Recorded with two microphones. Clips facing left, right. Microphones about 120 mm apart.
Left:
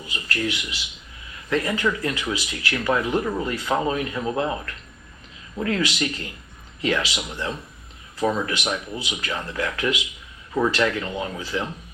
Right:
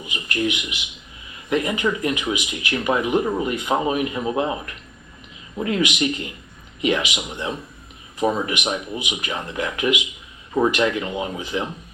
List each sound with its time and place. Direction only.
0.0 s speech: 20° right (ahead or behind)